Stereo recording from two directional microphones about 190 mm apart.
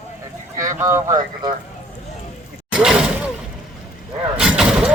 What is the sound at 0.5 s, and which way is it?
Speech, 15° right (ahead or behind).